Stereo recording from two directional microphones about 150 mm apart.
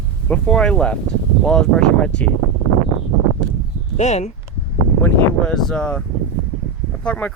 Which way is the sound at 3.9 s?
50° left (ahead or behind).